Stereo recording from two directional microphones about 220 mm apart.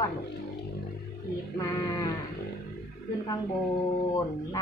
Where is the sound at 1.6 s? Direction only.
15° left (ahead or behind).